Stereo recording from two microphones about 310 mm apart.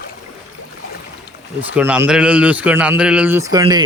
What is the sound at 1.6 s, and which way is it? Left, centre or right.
A man's voice, centre.